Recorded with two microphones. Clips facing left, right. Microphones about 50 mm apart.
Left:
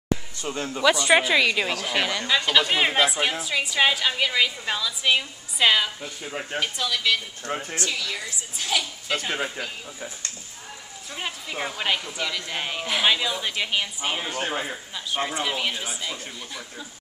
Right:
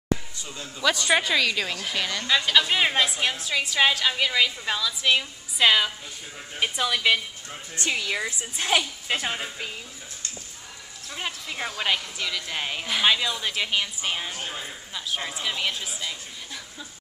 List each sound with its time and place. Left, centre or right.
0.4 s speech: left
0.8 s a woman's voice: centre
6.6 s a woman's voice: right
11.1 s a woman's voice: centre
14.3 s a man's voice: left
15.4 s a woman's voice: centre